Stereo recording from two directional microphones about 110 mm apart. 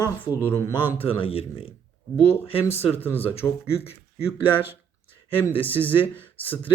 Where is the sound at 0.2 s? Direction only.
20° left (ahead or behind).